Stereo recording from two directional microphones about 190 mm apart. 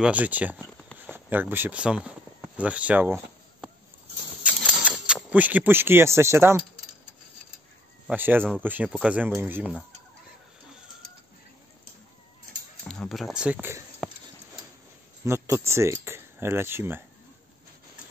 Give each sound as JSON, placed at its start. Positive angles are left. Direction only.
{"t": 0.0, "sound": "speech", "side_deg": -10}
{"t": 4.4, "sound": "a sound", "side_deg": -5}
{"t": 8.1, "sound": "speech", "side_deg": -10}
{"t": 12.8, "sound": "speech", "side_deg": 0}
{"t": 15.2, "sound": "speech", "side_deg": -15}